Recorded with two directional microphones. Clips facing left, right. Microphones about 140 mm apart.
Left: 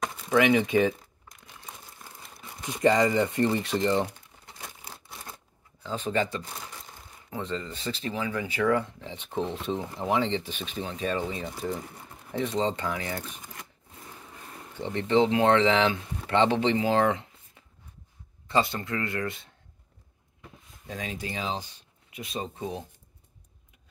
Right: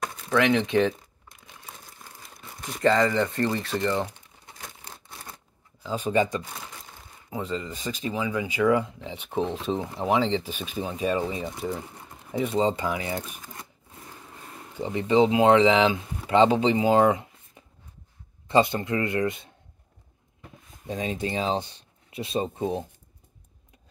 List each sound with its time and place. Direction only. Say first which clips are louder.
0.0 s a sound: even; centre (ahead or behind)
0.3 s speech: even; 5° left (ahead or behind)
2.6 s speech: right 1 dB; 15° left (ahead or behind)
4.6 s shuffling cards: even; centre (ahead or behind); by 6.4 s 15° right (ahead or behind)
7.2 s speech: right 2 dB; 10° right (ahead or behind)
14.7 s speech: right 2 dB; 10° right (ahead or behind)
20.8 s speech: right 6 dB; 25° right (ahead or behind)